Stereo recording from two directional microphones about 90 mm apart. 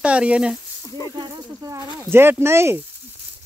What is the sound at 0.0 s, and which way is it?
Speech, 10° right (ahead or behind).